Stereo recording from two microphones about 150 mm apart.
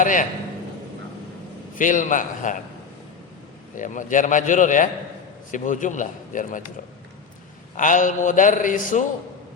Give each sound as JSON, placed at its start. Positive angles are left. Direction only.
{"t": 0.0, "sound": "a man's voice", "side_deg": 60}
{"t": 1.7, "sound": "a man's voice", "side_deg": 65}
{"t": 3.8, "sound": "a man's voice", "side_deg": 60}
{"t": 7.8, "sound": "a man's voice", "side_deg": 60}